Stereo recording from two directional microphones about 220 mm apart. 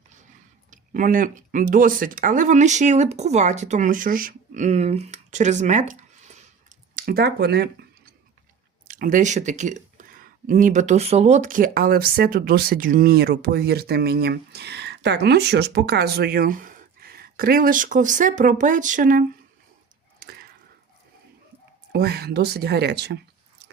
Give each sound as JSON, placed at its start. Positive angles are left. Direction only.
{"t": 0.7, "sound": "speech", "side_deg": -35}
{"t": 20.1, "sound": "chop", "side_deg": -45}
{"t": 21.9, "sound": "speech", "side_deg": -45}